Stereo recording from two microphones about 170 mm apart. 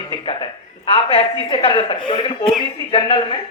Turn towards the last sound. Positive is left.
turn(degrees=30)  # may be behind; listen again after turning